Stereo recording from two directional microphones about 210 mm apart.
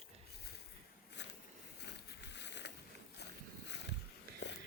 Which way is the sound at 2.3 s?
55° left (ahead or behind).